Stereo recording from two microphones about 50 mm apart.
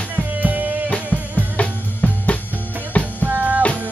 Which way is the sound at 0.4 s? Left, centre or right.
Right.